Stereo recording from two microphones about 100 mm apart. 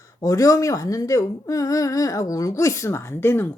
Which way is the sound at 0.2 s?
35° left (ahead or behind).